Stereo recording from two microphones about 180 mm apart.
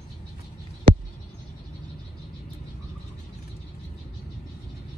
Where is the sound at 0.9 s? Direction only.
55° right (ahead or behind).